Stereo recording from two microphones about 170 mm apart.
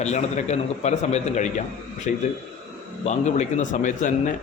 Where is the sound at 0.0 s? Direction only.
40° left (ahead or behind).